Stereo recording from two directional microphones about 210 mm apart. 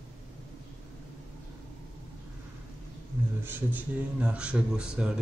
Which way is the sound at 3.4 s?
10° right (ahead or behind).